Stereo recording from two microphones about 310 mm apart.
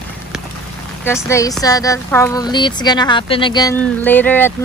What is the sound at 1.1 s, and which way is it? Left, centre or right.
A woman's voice, centre.